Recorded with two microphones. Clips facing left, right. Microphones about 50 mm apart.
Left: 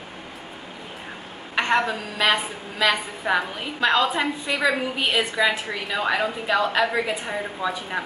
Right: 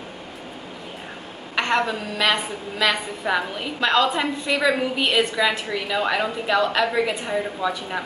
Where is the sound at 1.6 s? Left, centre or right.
Centre.